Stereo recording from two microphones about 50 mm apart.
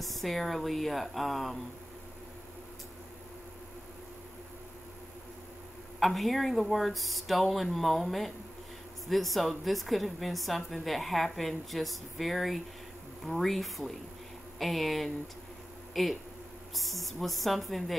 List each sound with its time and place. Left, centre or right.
0.0 s a woman's voice: centre
5.9 s a woman's voice: centre